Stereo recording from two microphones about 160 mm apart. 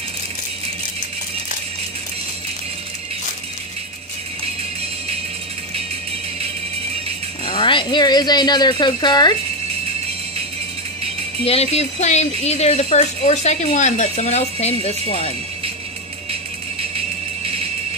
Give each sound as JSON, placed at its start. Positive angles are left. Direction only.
{"t": 7.4, "sound": "speech", "side_deg": 30}
{"t": 11.4, "sound": "speech", "side_deg": 40}
{"t": 16.9, "sound": "music", "side_deg": -35}